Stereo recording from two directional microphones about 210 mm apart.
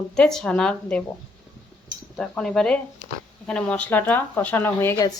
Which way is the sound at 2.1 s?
5° left (ahead or behind).